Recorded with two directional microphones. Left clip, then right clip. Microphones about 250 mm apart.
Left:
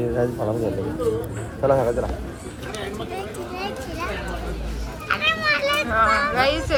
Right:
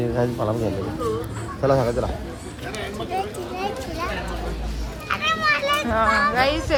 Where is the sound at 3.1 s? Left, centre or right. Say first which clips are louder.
Right 3 dB; centre.